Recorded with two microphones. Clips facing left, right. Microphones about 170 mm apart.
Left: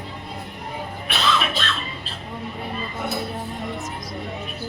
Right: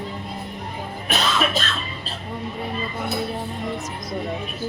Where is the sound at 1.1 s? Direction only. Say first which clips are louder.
Right 1 dB; 40° right (ahead or behind).